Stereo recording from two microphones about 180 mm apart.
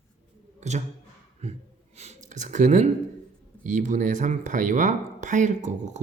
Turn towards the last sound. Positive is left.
turn(degrees=-40)  # may be behind; listen again after turning